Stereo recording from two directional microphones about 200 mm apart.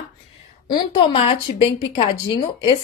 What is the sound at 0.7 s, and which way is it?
A woman's voice, 25° left (ahead or behind).